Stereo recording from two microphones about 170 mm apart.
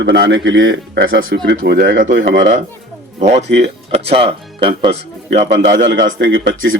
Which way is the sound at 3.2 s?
45° right (ahead or behind).